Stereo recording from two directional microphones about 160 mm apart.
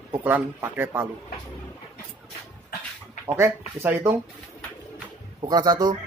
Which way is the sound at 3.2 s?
15° right (ahead or behind).